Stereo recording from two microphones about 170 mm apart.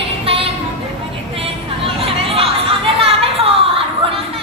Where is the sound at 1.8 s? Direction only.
35° right (ahead or behind).